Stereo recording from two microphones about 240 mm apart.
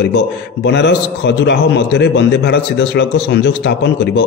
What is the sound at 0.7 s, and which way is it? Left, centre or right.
A man's voice, left.